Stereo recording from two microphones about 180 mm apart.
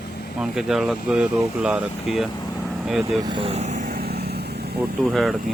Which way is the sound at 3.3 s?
30° right (ahead or behind).